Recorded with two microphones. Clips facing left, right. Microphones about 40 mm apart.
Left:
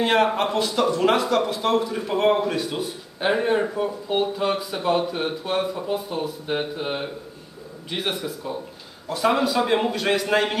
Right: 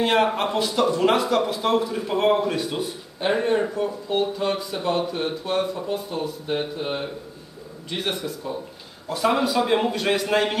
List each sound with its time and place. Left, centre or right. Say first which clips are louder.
0.0 s speech: left 1 dB; centre